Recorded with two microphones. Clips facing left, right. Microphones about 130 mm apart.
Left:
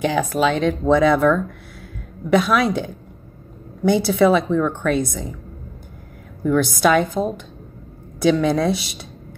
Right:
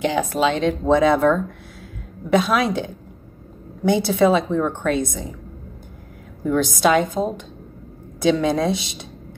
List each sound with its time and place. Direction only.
0.0 s speech: 25° right (ahead or behind)
6.4 s speech: 20° right (ahead or behind)